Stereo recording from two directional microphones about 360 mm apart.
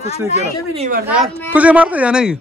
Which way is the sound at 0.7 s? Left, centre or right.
Centre.